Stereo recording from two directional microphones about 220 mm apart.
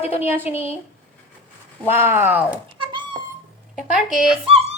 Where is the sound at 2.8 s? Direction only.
20° right (ahead or behind).